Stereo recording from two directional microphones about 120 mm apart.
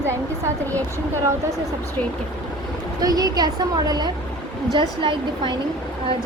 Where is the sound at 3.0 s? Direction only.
30° right (ahead or behind).